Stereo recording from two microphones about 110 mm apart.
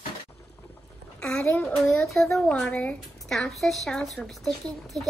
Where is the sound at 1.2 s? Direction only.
15° left (ahead or behind).